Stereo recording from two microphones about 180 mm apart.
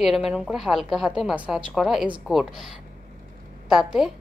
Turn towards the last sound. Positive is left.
turn(degrees=0)  # may be behind; listen again after turning